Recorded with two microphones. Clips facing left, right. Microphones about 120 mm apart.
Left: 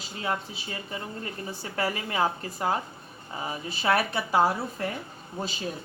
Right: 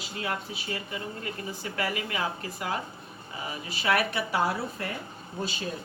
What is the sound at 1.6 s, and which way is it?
A woman's voice, 30° left (ahead or behind).